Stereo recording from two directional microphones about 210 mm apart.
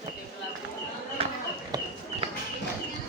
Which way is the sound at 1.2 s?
25° right (ahead or behind).